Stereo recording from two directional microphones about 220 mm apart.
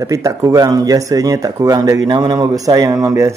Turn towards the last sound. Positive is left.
turn(degrees=-15)  # may be behind; listen again after turning